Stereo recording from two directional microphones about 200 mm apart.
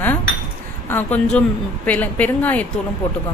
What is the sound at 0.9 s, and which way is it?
A woman's voice, 10° left (ahead or behind).